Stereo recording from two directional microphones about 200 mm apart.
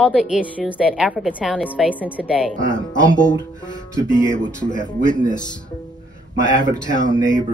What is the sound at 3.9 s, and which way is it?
Music, 20° left (ahead or behind).